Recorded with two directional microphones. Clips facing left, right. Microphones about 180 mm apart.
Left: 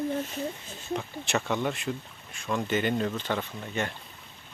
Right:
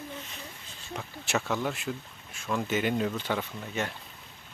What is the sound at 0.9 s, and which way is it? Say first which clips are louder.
Speech: left 3 dB; 5° right (ahead or behind).